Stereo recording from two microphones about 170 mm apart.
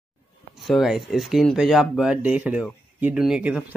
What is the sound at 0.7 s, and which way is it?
Speech, centre (ahead or behind).